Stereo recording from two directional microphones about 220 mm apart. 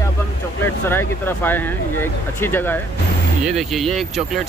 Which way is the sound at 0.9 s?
10° left (ahead or behind).